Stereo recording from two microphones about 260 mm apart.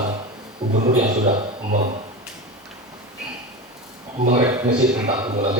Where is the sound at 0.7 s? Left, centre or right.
Right.